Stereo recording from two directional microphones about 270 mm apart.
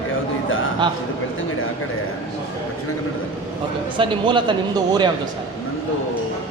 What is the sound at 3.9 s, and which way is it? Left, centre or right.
Speech, centre.